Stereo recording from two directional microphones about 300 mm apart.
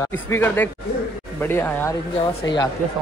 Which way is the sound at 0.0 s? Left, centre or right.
Centre.